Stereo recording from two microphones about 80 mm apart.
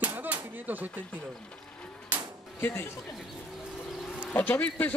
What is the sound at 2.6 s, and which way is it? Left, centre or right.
Speech, left.